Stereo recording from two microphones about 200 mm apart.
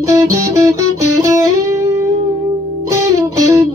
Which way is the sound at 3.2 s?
15° right (ahead or behind).